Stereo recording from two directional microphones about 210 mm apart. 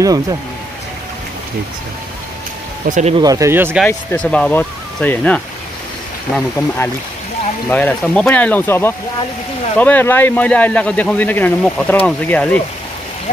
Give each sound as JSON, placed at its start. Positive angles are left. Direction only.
{"t": 0.0, "sound": "speech", "side_deg": -15}
{"t": 2.9, "sound": "speech", "side_deg": -35}
{"t": 3.2, "sound": "speech", "side_deg": -15}
{"t": 3.8, "sound": "speech", "side_deg": 5}
{"t": 7.7, "sound": "speech", "side_deg": 5}